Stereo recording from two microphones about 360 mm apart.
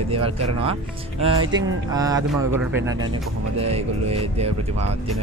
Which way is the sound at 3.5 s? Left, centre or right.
Centre.